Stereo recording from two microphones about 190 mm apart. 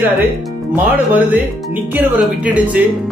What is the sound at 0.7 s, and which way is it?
Speech, 10° right (ahead or behind).